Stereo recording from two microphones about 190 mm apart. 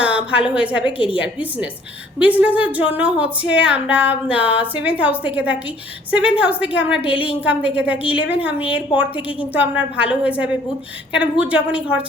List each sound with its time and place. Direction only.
0.0 s a woman's voice: 5° right (ahead or behind)